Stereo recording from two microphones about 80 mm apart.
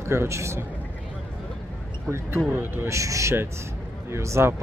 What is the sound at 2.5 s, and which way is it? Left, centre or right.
Speech, right.